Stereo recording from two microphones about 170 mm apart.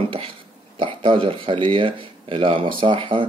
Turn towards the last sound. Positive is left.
turn(degrees=-30)  # may be behind; listen again after turning